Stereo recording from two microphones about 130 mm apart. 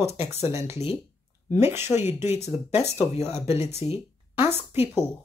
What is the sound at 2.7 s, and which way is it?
Speech, 55° left (ahead or behind).